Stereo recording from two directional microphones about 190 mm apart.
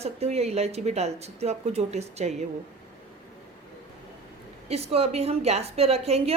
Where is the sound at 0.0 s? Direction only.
35° right (ahead or behind).